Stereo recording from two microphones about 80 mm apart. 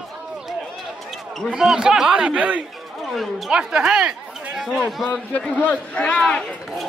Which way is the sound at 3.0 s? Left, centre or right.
Centre.